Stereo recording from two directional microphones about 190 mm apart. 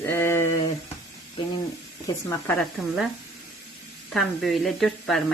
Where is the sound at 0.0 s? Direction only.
10° left (ahead or behind).